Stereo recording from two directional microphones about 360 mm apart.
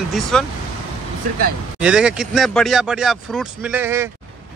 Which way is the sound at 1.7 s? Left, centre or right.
Centre.